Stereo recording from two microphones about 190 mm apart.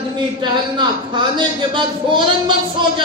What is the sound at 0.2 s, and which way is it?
A man's voice, 25° right (ahead or behind).